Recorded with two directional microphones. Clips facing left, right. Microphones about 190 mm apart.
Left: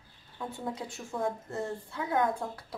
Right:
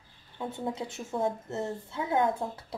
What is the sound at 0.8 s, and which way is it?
A woman's voice, 25° right (ahead or behind).